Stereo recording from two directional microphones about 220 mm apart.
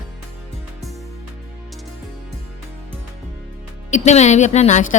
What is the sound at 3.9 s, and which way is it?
Speech, 30° left (ahead or behind).